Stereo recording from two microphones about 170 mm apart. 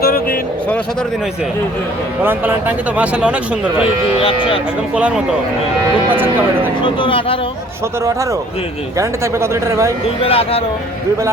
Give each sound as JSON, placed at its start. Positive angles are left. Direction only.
{"t": 0.0, "sound": "vehicle", "side_deg": 60}
{"t": 2.2, "sound": "speech", "side_deg": -10}
{"t": 4.2, "sound": "speech", "side_deg": 35}
{"t": 4.9, "sound": "speech", "side_deg": -5}
{"t": 6.8, "sound": "speech", "side_deg": 30}
{"t": 8.0, "sound": "a man's voice", "side_deg": -20}
{"t": 10.2, "sound": "speech", "side_deg": 35}